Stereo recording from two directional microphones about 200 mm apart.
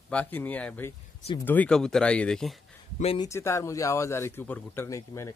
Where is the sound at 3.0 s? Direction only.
30° left (ahead or behind).